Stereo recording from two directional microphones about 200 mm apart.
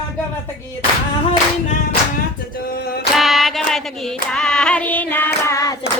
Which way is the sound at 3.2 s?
Centre (ahead or behind).